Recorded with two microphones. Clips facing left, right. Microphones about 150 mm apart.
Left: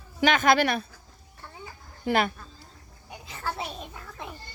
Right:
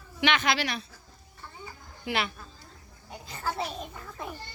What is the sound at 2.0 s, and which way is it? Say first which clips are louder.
Speech: left 6 dB; 45° left (ahead or behind).